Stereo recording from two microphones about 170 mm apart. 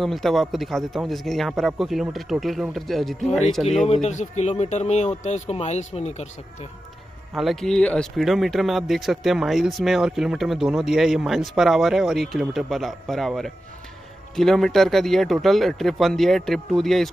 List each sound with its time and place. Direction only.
0.0 s speech: centre (ahead or behind)
3.9 s speech: 40° left (ahead or behind)
7.3 s speech: centre (ahead or behind)